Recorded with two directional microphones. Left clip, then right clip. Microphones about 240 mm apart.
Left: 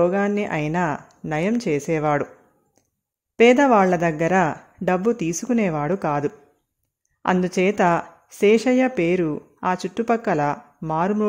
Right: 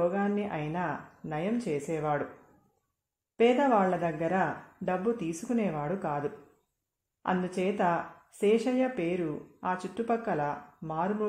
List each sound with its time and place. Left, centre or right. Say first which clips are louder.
0.0 s speech: left 9 dB; left
3.3 s speech: left 10 dB; left